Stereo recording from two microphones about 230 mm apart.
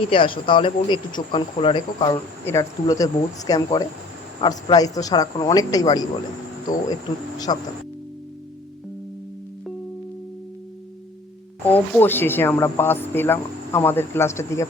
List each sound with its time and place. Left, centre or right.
0.1 s speech: left
7.3 s speech: centre
11.6 s speech: centre